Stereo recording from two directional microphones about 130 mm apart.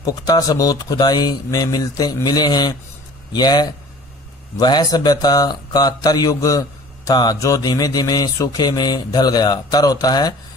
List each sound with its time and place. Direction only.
0.0 s speech: 30° left (ahead or behind)